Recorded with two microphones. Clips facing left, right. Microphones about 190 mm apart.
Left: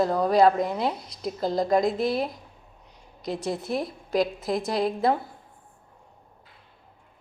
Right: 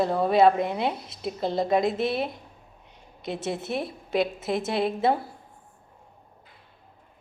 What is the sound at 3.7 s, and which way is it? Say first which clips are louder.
A woman's voice: left 1 dB; 5° right (ahead or behind).